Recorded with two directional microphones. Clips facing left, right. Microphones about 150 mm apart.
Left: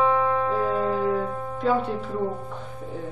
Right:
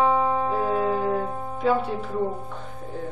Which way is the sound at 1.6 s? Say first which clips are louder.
Right 1 dB; 5° right (ahead or behind).